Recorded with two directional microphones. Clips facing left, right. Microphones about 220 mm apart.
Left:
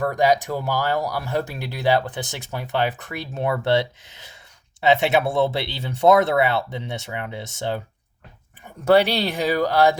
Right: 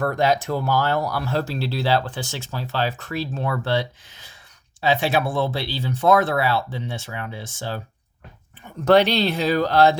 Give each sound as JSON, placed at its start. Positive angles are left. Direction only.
{"t": 0.0, "sound": "speech", "side_deg": 15}
{"t": 8.8, "sound": "speech", "side_deg": 10}